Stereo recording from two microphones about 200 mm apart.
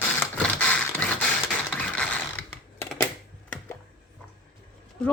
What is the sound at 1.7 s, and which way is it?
Ratchet, 5° left (ahead or behind).